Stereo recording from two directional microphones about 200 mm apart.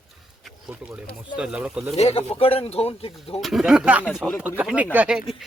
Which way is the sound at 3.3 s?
Centre (ahead or behind).